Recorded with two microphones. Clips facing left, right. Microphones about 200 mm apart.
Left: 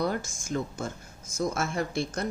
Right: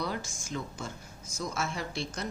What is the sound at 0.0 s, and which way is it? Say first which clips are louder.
Speech: left 6 dB; 50° left (ahead or behind).